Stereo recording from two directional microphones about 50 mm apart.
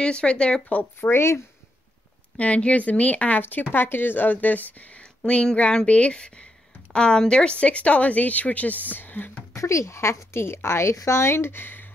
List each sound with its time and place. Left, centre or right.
0.0 s speech: left
0.7 s a woman's voice: left
1.1 s speech: left
2.3 s a woman's voice: left
5.2 s speech: centre; by 9.4 s left
9.5 s speech: left